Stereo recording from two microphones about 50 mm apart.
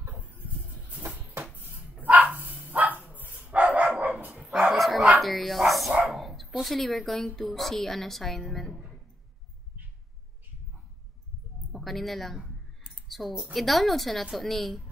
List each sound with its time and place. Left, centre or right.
0.0 s a sound: right
0.8 s music: right
1.5 s dog: right
4.4 s bow-wow: centre
4.6 s bow-wow: centre
5.2 s speech: centre
5.7 s bow-wow: centre
6.1 s dog: centre
6.6 s a woman's voice: centre
11.7 s speech: centre
13.5 s a woman's voice: centre